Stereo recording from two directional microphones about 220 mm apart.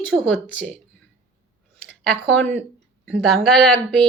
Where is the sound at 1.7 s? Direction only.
5° left (ahead or behind).